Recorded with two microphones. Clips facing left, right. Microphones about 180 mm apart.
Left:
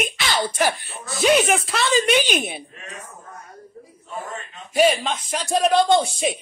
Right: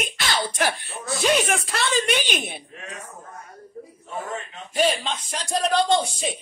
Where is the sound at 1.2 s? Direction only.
5° left (ahead or behind).